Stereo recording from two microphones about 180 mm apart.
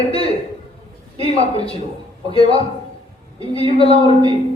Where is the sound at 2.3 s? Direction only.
30° left (ahead or behind).